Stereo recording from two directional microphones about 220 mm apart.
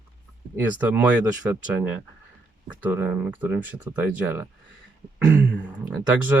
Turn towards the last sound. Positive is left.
turn(degrees=-10)  # may be behind; listen again after turning